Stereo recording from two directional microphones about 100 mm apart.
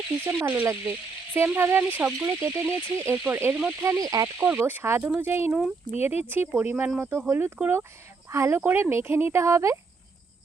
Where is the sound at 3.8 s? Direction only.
35° right (ahead or behind).